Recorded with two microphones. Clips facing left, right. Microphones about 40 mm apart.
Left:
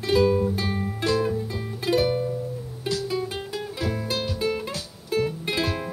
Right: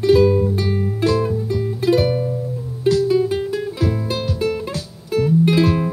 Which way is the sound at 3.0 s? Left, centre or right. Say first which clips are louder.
Right 11 dB; centre.